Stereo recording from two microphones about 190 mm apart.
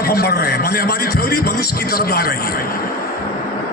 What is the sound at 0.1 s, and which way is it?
A man's voice, 55° left (ahead or behind).